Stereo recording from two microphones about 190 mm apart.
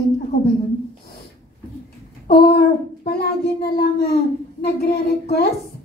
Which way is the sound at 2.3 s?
55° left (ahead or behind).